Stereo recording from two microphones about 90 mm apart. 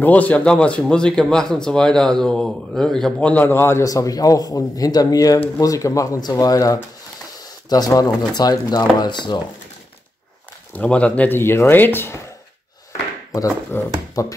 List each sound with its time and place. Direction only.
0.0 s speech: 15° left (ahead or behind)
3.2 s speech: 15° left (ahead or behind)
3.8 s speech: 40° left (ahead or behind)
10.7 s speech: 15° left (ahead or behind)
13.7 s speech: 25° left (ahead or behind)
14.2 s speech: 40° left (ahead or behind)